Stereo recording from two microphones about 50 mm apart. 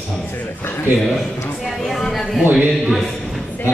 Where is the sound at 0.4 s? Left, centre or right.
Left.